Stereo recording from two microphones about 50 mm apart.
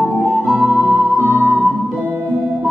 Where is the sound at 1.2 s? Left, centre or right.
Right.